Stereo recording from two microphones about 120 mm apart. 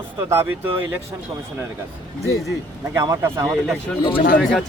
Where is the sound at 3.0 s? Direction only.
30° right (ahead or behind).